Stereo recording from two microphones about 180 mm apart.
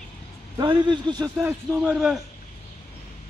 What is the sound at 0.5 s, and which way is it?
Speech, 25° right (ahead or behind).